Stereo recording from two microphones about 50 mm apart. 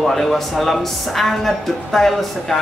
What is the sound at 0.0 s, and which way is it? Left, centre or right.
Speech, centre.